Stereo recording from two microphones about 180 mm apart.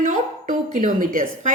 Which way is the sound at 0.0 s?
50° right (ahead or behind).